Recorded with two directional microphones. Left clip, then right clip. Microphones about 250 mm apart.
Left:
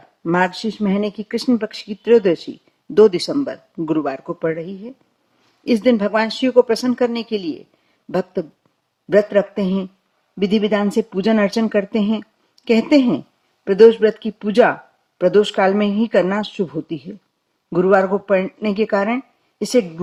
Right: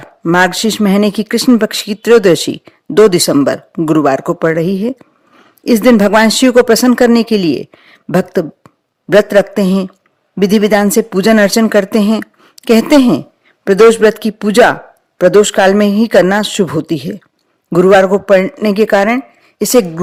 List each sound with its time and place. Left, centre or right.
0.2 s speech: right
0.4 s a man's voice: right